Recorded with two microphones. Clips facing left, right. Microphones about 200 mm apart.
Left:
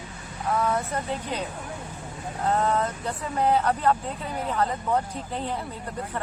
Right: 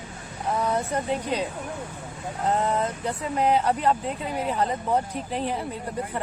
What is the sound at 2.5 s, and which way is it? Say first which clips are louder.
Speech: even; 20° right (ahead or behind).